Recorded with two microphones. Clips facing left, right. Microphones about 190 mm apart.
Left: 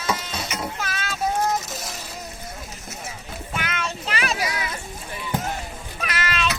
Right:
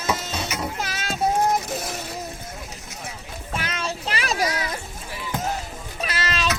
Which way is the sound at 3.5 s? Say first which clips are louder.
Right 1 dB; 35° right (ahead or behind).